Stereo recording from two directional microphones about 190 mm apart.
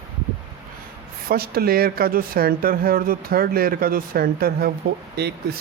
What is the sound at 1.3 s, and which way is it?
Speech, 55° right (ahead or behind).